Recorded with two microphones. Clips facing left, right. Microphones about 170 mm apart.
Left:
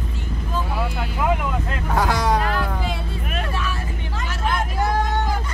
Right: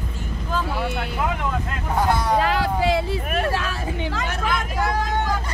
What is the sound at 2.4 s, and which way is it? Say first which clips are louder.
Vehicle: right 4 dB; 90° right.